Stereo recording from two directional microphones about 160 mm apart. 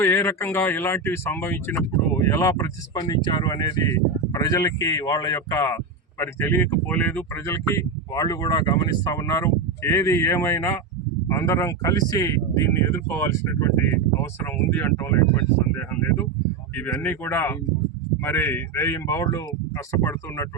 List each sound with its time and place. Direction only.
0.0 s speech: 15° left (ahead or behind)